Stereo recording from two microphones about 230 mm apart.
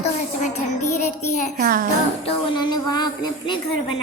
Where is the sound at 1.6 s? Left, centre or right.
Right.